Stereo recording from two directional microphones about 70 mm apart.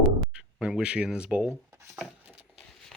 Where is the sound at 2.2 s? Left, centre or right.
Centre.